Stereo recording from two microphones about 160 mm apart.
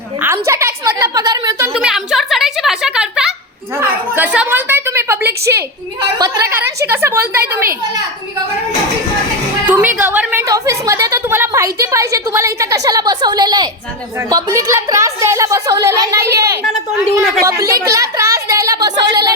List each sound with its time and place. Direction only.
0.2 s a woman's voice: 15° right (ahead or behind)
1.8 s a sound: 5° right (ahead or behind)
3.8 s a woman's voice: 10° right (ahead or behind)
9.6 s a woman's voice: 10° right (ahead or behind)
10.4 s a woman's voice: 20° right (ahead or behind)